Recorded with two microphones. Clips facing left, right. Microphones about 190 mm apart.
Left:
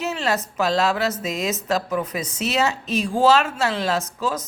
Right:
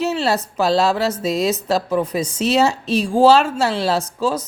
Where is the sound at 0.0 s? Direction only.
30° right (ahead or behind).